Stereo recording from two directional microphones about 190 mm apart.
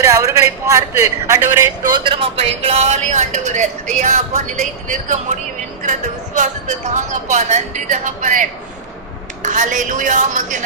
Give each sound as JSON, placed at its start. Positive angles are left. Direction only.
{"t": 0.0, "sound": "a man's voice", "side_deg": -15}
{"t": 2.0, "sound": "speech", "side_deg": -30}